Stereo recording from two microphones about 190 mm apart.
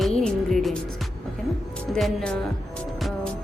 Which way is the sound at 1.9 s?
Centre (ahead or behind).